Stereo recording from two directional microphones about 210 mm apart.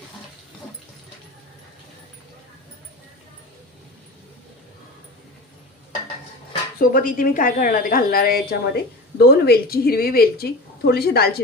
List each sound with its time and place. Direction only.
6.7 s a woman's voice: 40° left (ahead or behind)